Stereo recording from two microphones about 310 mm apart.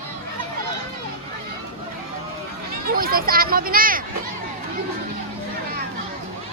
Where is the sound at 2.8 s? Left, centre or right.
Right.